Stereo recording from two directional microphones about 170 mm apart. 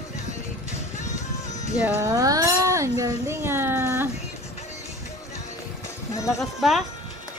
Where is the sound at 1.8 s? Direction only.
20° right (ahead or behind).